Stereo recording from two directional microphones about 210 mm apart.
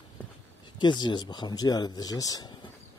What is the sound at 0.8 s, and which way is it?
Speech, 20° left (ahead or behind).